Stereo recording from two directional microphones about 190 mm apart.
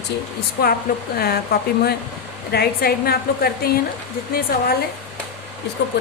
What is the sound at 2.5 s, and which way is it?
A woman's voice, 55° left (ahead or behind).